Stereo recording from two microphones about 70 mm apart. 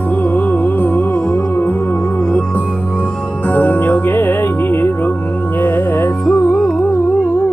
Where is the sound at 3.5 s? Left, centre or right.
Left.